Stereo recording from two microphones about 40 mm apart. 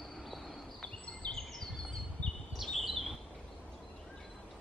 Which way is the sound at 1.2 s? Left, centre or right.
Left.